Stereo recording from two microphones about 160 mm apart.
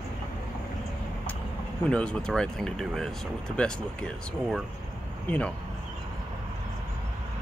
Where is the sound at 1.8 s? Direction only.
5° left (ahead or behind).